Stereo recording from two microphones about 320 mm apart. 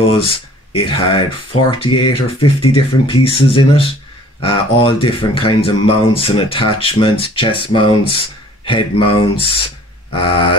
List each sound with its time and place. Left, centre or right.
0.0 s speech: centre